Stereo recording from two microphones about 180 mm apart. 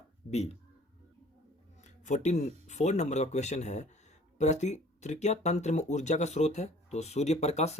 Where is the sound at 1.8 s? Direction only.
40° left (ahead or behind).